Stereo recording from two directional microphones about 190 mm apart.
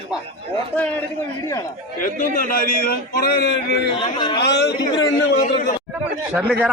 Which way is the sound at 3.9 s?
25° left (ahead or behind).